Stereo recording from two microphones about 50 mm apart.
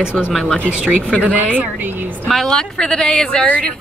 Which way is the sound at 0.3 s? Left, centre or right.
Centre.